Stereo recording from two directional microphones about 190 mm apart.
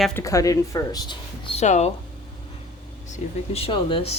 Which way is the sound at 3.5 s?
30° left (ahead or behind).